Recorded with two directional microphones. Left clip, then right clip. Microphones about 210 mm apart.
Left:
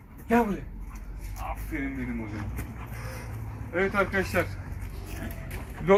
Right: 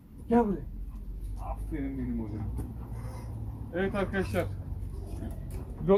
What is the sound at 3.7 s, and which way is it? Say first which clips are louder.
Speech: left 5 dB; 15° right (ahead or behind).